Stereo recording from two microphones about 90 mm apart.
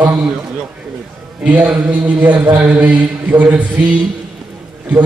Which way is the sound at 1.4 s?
15° right (ahead or behind).